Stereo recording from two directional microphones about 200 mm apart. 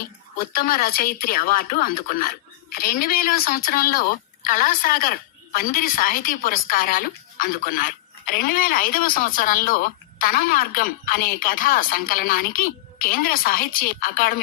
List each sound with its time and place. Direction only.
0.5 s speech: 45° left (ahead or behind)